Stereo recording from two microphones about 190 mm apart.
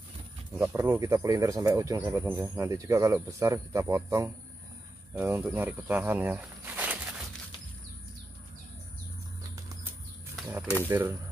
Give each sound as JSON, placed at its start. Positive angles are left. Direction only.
{"t": 0.6, "sound": "speech", "side_deg": -15}
{"t": 10.9, "sound": "speech", "side_deg": -15}